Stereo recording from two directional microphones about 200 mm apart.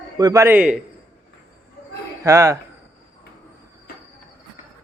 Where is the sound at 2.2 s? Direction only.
15° right (ahead or behind).